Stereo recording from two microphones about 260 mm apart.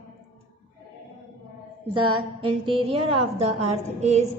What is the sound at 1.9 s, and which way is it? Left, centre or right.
A woman's voice, centre.